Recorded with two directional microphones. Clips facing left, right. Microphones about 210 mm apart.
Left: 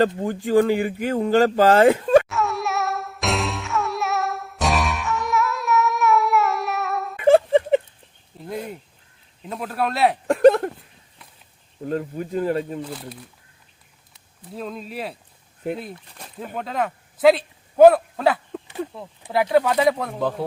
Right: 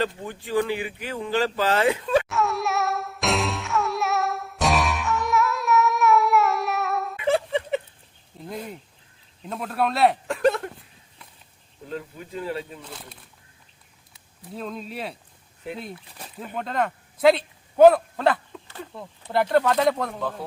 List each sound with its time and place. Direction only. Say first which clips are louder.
0.2 s speech: left 7 dB; 45° left (ahead or behind)
2.3 s music: even; centre (ahead or behind)
7.2 s a sound: left 10 dB; 45° left (ahead or behind)
8.4 s speech: left 4 dB; centre (ahead or behind)
10.2 s a sound: left 8 dB; 45° left (ahead or behind)
11.9 s speech: left 9 dB; 45° left (ahead or behind)
12.8 s speech: left 9 dB; centre (ahead or behind)